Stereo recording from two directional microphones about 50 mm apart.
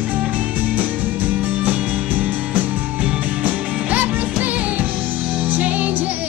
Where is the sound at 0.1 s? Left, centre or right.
Right.